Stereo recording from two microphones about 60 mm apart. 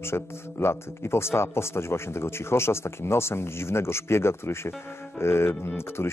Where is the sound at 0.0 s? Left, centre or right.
Left.